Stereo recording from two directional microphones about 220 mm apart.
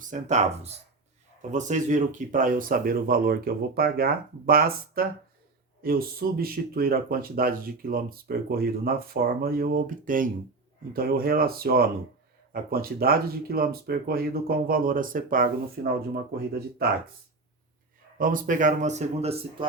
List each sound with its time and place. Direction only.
0.0 s speech: 35° right (ahead or behind)
18.2 s speech: 40° right (ahead or behind)